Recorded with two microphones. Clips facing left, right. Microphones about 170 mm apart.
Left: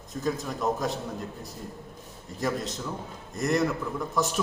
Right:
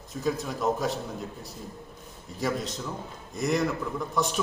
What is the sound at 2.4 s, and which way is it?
A man's voice, centre (ahead or behind).